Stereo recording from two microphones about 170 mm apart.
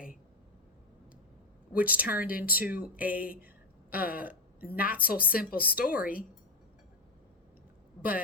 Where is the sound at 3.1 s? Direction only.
55° left (ahead or behind).